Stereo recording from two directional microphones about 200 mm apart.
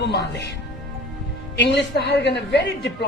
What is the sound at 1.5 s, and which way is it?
A man's voice, 60° left (ahead or behind).